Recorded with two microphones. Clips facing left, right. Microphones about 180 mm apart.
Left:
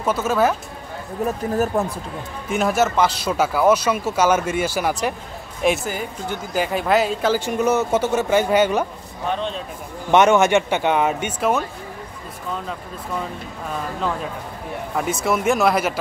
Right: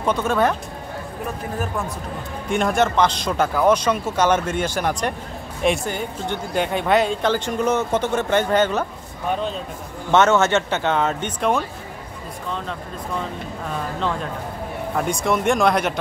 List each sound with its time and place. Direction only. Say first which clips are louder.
0.0 s speech: left 1 dB; 5° left (ahead or behind)
1.2 s speech: left 7 dB; 40° left (ahead or behind)
2.5 s speech: even; 5° left (ahead or behind)
10.1 s speech: left 2 dB; 15° left (ahead or behind)
15.0 s speech: even; 5° left (ahead or behind)